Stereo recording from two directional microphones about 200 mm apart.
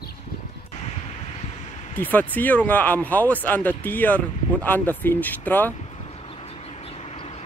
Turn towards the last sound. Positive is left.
turn(degrees=30)  # may be behind; listen again after turning